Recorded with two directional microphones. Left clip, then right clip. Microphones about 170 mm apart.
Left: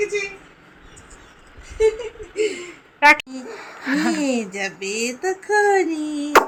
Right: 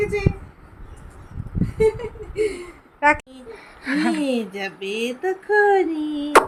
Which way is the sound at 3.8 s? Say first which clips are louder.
Left 1 dB; 5° right (ahead or behind).